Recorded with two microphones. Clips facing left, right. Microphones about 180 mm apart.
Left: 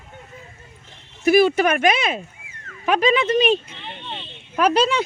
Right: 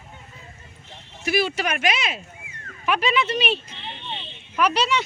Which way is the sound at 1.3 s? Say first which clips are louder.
Left 8 dB; 50° left (ahead or behind).